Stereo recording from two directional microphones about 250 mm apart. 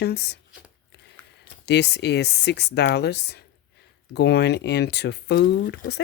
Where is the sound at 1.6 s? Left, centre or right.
Left.